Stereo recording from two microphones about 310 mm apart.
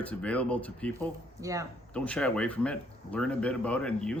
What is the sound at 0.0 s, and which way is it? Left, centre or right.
Speech, centre.